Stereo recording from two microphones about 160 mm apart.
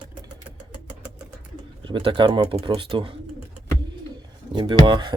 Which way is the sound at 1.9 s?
30° right (ahead or behind).